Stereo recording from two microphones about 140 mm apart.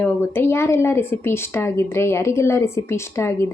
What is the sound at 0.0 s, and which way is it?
A woman's voice, 15° left (ahead or behind).